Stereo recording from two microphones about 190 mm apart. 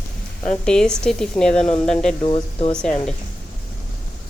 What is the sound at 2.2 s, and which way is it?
Speech, 30° left (ahead or behind).